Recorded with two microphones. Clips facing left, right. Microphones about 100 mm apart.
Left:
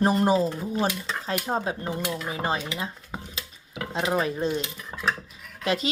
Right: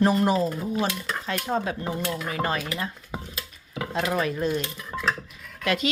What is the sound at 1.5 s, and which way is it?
Speech, 30° left (ahead or behind).